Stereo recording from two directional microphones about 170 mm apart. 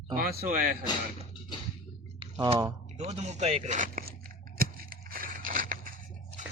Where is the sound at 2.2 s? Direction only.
30° right (ahead or behind).